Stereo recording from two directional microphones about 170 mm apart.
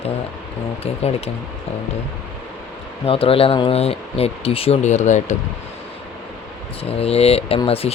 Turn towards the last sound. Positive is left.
turn(degrees=35)  # may be behind; listen again after turning